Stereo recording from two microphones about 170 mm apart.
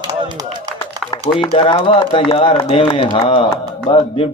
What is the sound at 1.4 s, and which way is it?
A man's voice, 30° left (ahead or behind).